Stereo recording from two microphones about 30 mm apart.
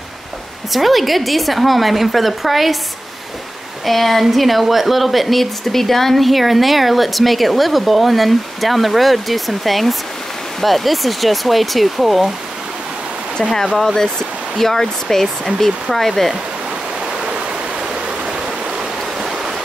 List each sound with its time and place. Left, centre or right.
0.7 s speech: centre
3.8 s speech: centre
13.4 s speech: centre
19.2 s stream: centre